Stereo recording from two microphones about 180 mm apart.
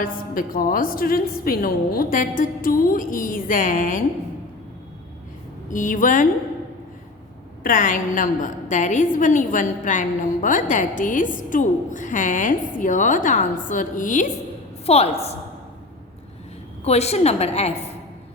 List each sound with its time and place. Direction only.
0.0 s a woman's voice: 50° left (ahead or behind)
5.7 s a woman's voice: 45° left (ahead or behind)
7.6 s a woman's voice: 50° left (ahead or behind)
16.8 s a woman's voice: 35° left (ahead or behind)